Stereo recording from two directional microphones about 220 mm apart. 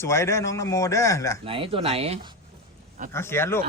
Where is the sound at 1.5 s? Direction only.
25° right (ahead or behind).